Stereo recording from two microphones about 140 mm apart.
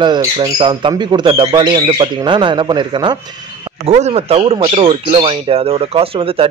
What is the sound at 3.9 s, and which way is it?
Speech, 50° right (ahead or behind).